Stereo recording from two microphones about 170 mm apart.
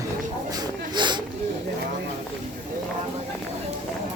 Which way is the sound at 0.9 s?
25° right (ahead or behind).